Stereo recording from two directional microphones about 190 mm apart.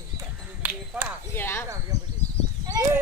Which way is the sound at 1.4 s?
10° left (ahead or behind).